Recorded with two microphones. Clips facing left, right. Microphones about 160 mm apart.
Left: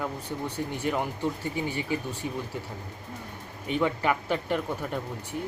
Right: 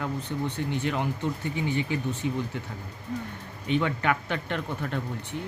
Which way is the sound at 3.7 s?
5° left (ahead or behind).